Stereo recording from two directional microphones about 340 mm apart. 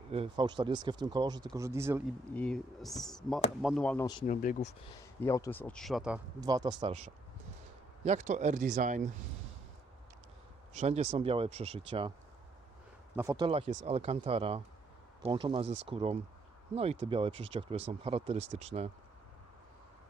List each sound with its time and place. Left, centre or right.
0.1 s speech: centre
2.3 s speech: centre; by 4.7 s left
5.2 s speech: centre; by 9.0 s right
10.8 s speech: centre
13.1 s speech: centre
15.6 s speech: right
15.9 s speech: centre